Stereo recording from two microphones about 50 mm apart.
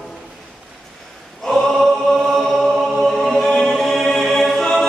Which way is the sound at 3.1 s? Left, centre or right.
Centre.